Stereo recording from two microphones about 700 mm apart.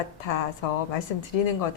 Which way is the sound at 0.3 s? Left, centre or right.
Left.